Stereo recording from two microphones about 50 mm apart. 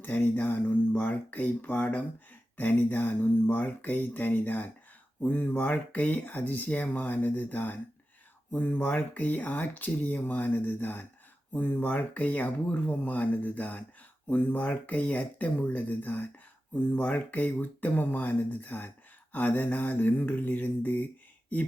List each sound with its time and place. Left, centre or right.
0.0 s speech: left